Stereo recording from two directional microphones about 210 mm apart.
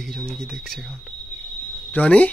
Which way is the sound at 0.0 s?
Centre (ahead or behind).